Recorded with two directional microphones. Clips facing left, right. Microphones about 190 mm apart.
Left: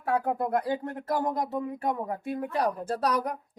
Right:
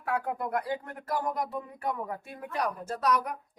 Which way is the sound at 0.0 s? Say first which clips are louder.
Left 4 dB; 30° left (ahead or behind).